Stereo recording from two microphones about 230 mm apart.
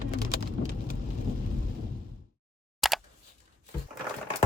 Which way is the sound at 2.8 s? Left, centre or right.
Centre.